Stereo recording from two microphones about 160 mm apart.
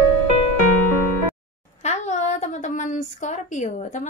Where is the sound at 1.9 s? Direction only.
45° left (ahead or behind).